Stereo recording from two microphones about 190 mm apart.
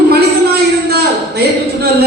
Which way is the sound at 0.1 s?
55° right (ahead or behind).